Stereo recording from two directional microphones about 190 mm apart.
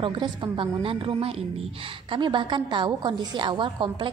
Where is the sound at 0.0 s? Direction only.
25° right (ahead or behind).